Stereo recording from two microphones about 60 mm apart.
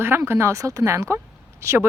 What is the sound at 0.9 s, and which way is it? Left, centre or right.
Speech, right.